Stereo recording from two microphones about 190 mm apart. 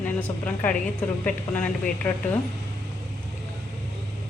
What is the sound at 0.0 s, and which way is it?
A woman's voice, 10° left (ahead or behind).